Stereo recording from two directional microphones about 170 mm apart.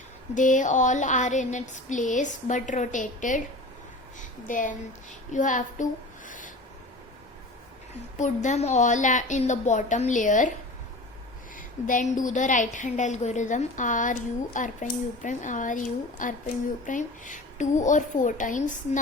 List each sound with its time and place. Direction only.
0.3 s a woman's voice: 50° left (ahead or behind)
8.2 s a woman's voice: 45° left (ahead or behind)
11.5 s a woman's voice: 50° left (ahead or behind)